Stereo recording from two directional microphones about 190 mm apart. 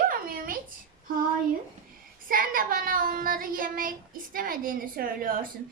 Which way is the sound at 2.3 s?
50° right (ahead or behind).